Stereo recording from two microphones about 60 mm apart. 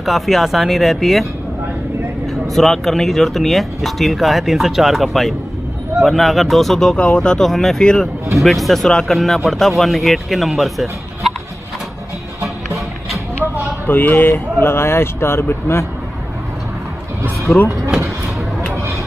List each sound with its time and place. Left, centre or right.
0.0 s speech: centre
2.4 s speech: centre
7.4 s speech: centre
7.8 s speech: centre
8.4 s speech: centre
13.8 s speech: left
14.6 s speech: left
17.5 s speech: left